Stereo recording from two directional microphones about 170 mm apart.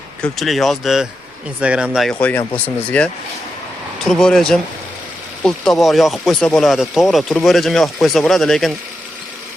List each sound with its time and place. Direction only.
0.2 s speech: centre (ahead or behind)
2.5 s speech: 10° left (ahead or behind)